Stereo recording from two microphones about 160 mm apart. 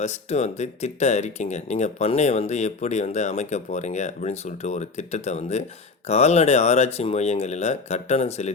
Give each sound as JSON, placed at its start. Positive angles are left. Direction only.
{"t": 0.0, "sound": "speech", "side_deg": 45}